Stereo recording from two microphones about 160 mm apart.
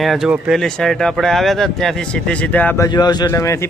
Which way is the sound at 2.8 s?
25° left (ahead or behind).